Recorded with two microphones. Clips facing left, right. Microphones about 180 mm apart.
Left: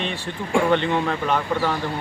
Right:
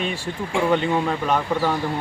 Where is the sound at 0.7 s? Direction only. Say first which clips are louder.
Even; 10° right (ahead or behind).